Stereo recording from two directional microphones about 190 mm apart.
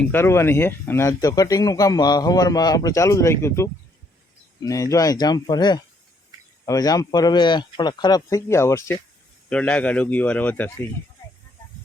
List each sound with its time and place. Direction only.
0.1 s speech: 15° left (ahead or behind)